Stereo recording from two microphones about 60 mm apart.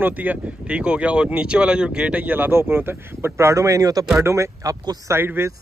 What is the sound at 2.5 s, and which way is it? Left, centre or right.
Speech, right.